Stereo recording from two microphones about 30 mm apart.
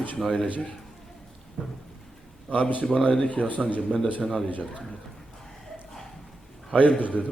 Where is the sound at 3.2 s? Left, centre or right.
Left.